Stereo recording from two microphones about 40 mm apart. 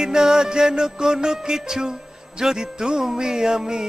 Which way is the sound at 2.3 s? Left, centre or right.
Centre.